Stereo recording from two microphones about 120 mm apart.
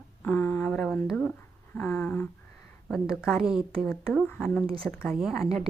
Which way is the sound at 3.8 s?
5° left (ahead or behind).